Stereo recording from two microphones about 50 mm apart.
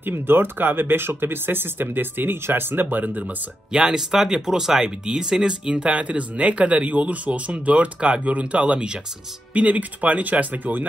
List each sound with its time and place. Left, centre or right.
0.0 s speech: right
3.7 s speech: centre
9.5 s speech: right